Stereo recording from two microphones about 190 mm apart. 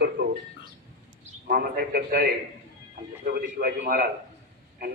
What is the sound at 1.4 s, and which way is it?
A man's voice, 50° right (ahead or behind).